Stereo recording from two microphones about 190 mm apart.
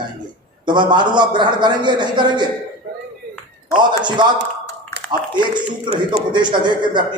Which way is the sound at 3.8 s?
25° right (ahead or behind).